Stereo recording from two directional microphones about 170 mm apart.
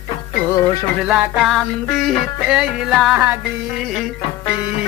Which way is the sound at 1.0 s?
5° right (ahead or behind).